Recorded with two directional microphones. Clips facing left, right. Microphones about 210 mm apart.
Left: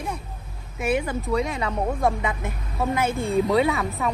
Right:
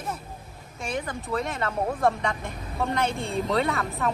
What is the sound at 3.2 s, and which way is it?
Speech, centre (ahead or behind).